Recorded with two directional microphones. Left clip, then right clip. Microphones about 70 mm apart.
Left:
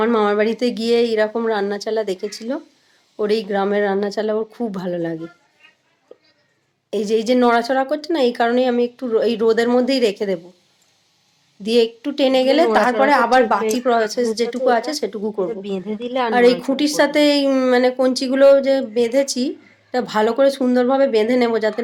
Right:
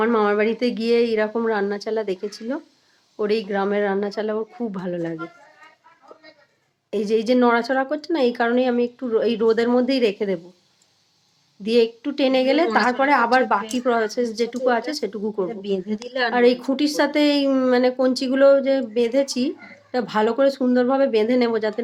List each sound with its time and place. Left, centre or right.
0.0 s speech: left
6.9 s speech: centre
11.6 s speech: centre
15.4 s a woman's voice: left
16.3 s speech: centre